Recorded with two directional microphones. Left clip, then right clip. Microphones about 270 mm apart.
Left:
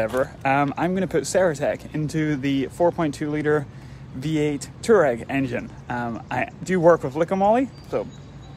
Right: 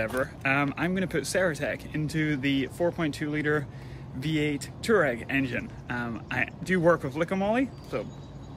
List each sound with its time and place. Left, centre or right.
0.0 s speech: centre